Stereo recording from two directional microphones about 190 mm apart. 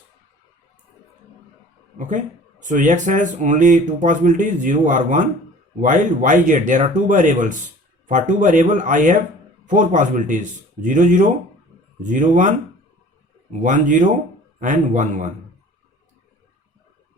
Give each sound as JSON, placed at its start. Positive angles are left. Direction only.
{"t": 2.0, "sound": "speech", "side_deg": -40}